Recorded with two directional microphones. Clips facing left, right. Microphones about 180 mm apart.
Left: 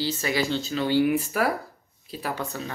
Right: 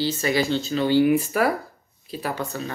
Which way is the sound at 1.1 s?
10° right (ahead or behind).